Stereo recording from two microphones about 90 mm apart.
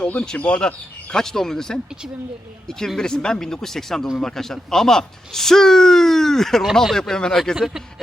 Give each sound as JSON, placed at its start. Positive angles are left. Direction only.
{"t": 0.1, "sound": "speech", "side_deg": 15}
{"t": 2.8, "sound": "speech", "side_deg": 5}
{"t": 7.5, "sound": "speech", "side_deg": -5}